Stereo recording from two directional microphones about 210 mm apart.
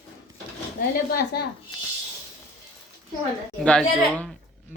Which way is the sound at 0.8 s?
50° left (ahead or behind).